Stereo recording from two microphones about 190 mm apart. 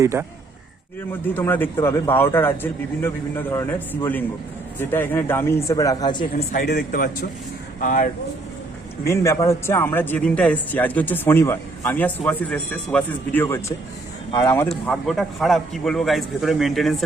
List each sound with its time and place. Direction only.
0.0 s a man's voice: 15° right (ahead or behind)
1.3 s speech: 10° left (ahead or behind)
6.3 s speech: 45° left (ahead or behind)
9.0 s a man's voice: 15° left (ahead or behind)